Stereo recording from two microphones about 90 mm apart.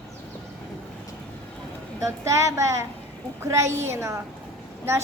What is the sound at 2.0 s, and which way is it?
A woman's voice, 35° right (ahead or behind).